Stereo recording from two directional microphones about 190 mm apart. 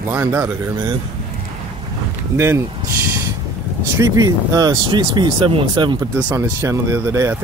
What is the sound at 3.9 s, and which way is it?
Speech, 20° right (ahead or behind).